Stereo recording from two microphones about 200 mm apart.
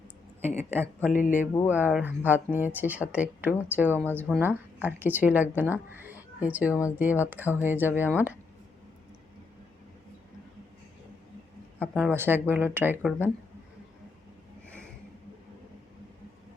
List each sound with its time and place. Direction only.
0.4 s speech: 10° right (ahead or behind)
1.1 s a sound: 40° left (ahead or behind)
1.6 s speech: 10° right (ahead or behind)
11.8 s speech: centre (ahead or behind)
12.1 s speech: 10° right (ahead or behind)